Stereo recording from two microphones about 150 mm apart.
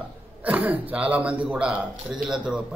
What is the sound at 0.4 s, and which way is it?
A man's voice, 10° right (ahead or behind).